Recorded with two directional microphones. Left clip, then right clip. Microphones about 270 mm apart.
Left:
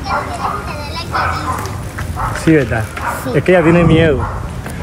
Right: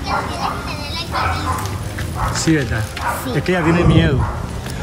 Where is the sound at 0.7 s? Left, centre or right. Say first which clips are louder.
Left 3 dB; centre.